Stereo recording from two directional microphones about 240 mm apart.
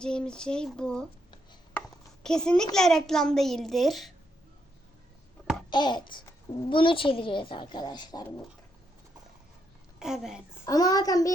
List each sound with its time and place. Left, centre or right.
0.0 s a child's voice: centre
2.2 s a child's voice: centre
5.7 s a child's voice: centre
10.0 s a child's voice: centre
10.7 s a child's voice: centre